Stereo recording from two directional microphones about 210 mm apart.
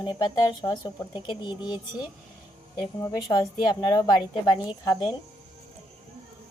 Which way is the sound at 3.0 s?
15° left (ahead or behind).